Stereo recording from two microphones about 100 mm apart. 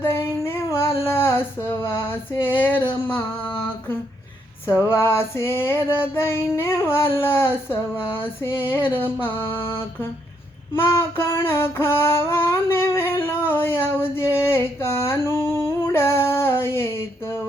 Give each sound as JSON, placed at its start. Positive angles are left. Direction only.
{"t": 0.0, "sound": "female singing", "side_deg": 25}
{"t": 3.2, "sound": "a sound", "side_deg": 10}
{"t": 4.9, "sound": "female singing", "side_deg": 25}